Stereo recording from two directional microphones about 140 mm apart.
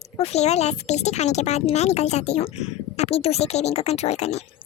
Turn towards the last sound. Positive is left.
turn(degrees=50)  # may be behind; listen again after turning